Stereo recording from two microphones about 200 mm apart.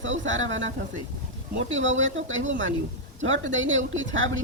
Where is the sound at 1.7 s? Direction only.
75° right (ahead or behind).